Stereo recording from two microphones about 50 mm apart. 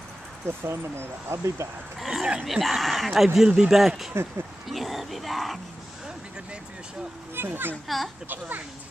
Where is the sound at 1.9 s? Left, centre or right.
Centre.